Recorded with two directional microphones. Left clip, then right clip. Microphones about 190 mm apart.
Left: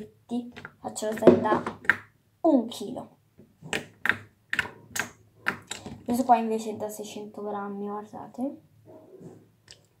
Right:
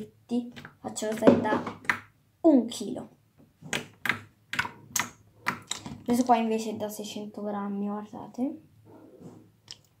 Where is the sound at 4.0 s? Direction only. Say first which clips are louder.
Left 6 dB; 15° right (ahead or behind).